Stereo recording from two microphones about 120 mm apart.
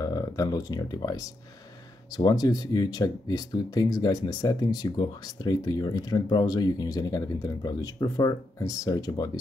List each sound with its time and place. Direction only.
0.0 s speech: 30° left (ahead or behind)